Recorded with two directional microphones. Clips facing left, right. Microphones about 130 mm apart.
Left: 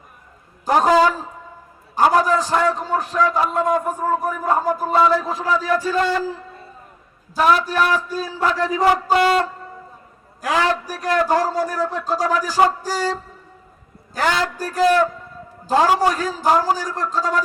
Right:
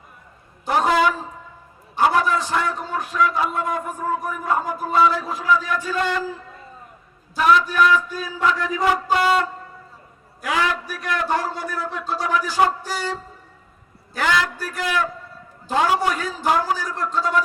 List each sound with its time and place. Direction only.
0.6 s a man's voice: 40° left (ahead or behind)
7.3 s a man's voice: 40° left (ahead or behind)
10.4 s a man's voice: 35° left (ahead or behind)